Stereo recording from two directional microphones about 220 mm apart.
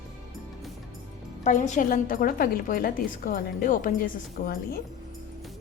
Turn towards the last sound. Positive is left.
turn(degrees=40)  # may be behind; listen again after turning